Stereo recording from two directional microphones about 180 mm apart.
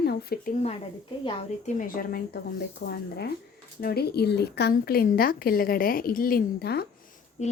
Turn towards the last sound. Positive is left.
turn(degrees=40)  # may be behind; listen again after turning